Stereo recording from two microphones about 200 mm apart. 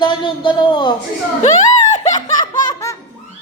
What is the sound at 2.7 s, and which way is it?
Baby laughter, 15° left (ahead or behind).